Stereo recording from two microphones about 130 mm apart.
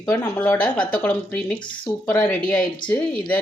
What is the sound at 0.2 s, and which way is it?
Speech, 20° left (ahead or behind).